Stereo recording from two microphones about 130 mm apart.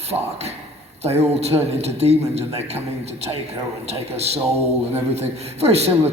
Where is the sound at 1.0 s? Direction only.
55° right (ahead or behind).